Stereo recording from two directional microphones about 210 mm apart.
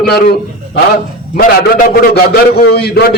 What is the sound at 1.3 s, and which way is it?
A man's voice, 45° left (ahead or behind).